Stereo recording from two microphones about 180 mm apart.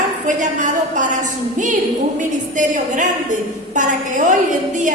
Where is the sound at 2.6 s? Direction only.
45° right (ahead or behind).